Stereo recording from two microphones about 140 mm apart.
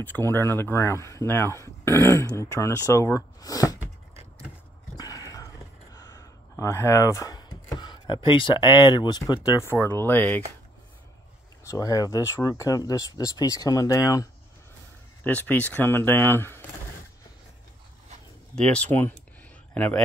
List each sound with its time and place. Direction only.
0.0 s speech: 15° left (ahead or behind)
4.9 s a sound: 25° left (ahead or behind)
6.6 s speech: 20° left (ahead or behind)
7.3 s speech: 30° left (ahead or behind); by 10.4 s 15° left (ahead or behind)
11.6 s speech: 25° left (ahead or behind)
15.2 s speech: 10° left (ahead or behind)
18.6 s speech: 5° left (ahead or behind)